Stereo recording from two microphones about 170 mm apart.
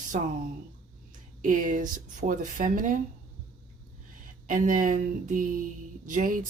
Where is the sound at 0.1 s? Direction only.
50° right (ahead or behind).